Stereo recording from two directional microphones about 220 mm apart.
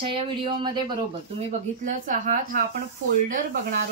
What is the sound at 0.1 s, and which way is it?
Speech, 20° right (ahead or behind).